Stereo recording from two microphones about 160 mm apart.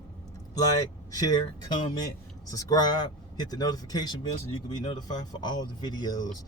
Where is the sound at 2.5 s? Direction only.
20° left (ahead or behind).